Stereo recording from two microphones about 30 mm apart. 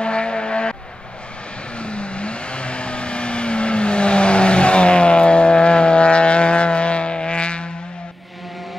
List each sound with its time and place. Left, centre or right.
0.0 s vehicle: left
1.8 s vehicle: left